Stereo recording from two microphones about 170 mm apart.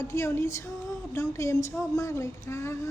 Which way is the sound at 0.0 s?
15° left (ahead or behind).